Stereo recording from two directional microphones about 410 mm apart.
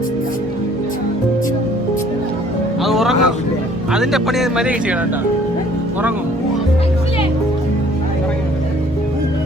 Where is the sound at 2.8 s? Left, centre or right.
Centre.